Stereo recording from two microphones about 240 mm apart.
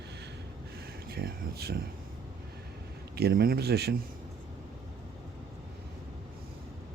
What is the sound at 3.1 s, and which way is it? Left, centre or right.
Speech, right.